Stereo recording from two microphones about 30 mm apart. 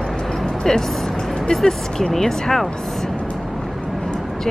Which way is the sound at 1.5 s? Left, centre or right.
Left.